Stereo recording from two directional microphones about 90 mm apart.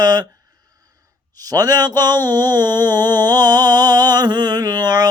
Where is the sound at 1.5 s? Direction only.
45° right (ahead or behind).